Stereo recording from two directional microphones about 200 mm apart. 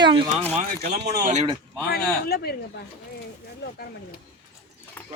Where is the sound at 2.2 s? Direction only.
50° left (ahead or behind).